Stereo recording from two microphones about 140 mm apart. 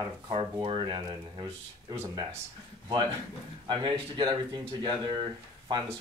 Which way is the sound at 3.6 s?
35° right (ahead or behind).